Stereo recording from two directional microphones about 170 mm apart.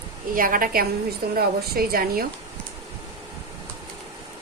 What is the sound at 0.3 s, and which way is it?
A woman's voice, 55° right (ahead or behind).